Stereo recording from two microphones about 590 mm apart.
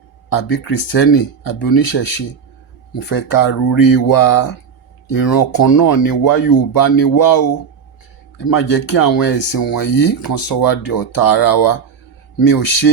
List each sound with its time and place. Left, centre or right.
0.3 s speech: left
3.1 s speech: left